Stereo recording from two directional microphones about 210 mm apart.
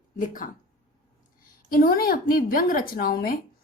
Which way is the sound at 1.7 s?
45° left (ahead or behind).